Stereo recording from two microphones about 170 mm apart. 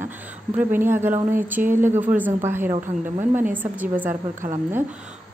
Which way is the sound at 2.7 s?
45° right (ahead or behind).